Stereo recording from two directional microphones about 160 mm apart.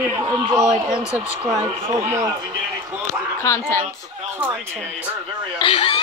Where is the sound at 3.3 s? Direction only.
15° left (ahead or behind).